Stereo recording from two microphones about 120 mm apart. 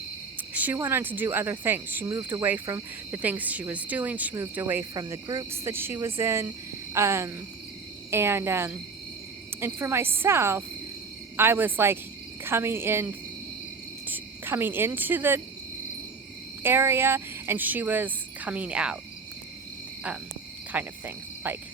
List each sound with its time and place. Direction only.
0.5 s cricket: 15° right (ahead or behind)
0.8 s speech: 20° right (ahead or behind)
2.0 s speech: 30° right (ahead or behind)
14.1 s cricket: 20° right (ahead or behind)
16.6 s speech: 20° right (ahead or behind)
20.7 s cricket: 15° right (ahead or behind)